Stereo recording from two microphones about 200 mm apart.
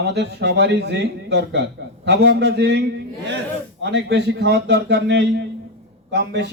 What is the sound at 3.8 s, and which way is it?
Speech, 60° right (ahead or behind).